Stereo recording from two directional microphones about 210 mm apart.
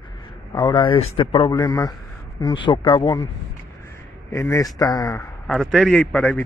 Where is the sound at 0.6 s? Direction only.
20° left (ahead or behind).